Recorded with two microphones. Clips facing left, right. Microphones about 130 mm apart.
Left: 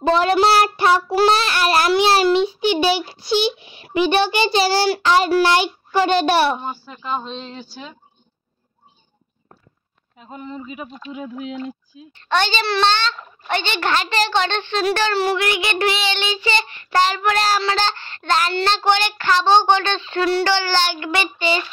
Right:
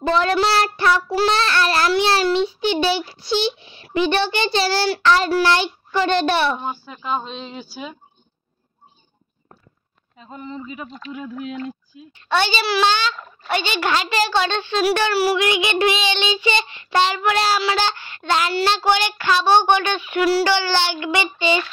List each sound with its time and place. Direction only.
0.0 s a child's voice: 20° left (ahead or behind)
6.6 s a woman's voice: 5° right (ahead or behind)
10.1 s a child's voice: 5° left (ahead or behind)
11.9 s a woman's voice: 15° right (ahead or behind)